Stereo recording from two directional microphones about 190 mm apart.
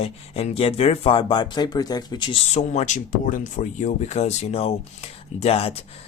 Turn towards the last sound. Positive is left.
turn(degrees=30)  # may be behind; listen again after turning